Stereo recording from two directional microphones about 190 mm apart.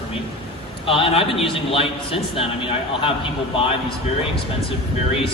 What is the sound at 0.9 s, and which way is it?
A man's voice, 30° left (ahead or behind).